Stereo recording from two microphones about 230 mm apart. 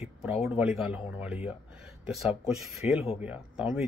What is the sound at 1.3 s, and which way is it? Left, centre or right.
Speech, left.